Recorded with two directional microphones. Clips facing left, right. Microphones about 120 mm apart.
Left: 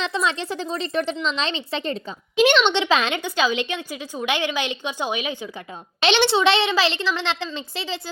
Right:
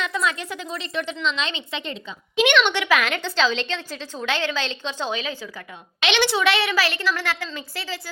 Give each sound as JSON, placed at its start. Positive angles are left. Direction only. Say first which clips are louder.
{"t": 0.0, "sound": "a woman's voice", "louder": "left 1 dB", "side_deg": 30}
{"t": 3.2, "sound": "a woman's voice", "louder": "left 1 dB", "side_deg": 15}
{"t": 6.0, "sound": "a woman's voice", "louder": "left 3 dB", "side_deg": 30}